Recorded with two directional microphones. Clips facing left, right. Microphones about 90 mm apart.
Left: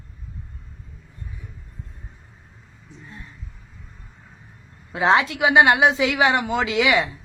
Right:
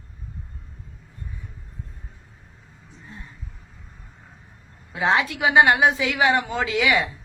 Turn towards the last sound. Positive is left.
turn(degrees=20)  # may be behind; listen again after turning